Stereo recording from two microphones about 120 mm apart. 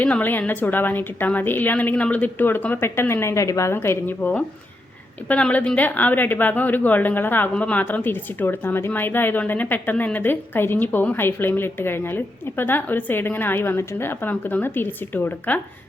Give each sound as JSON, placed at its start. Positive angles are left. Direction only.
{"t": 0.0, "sound": "a woman's voice", "side_deg": 15}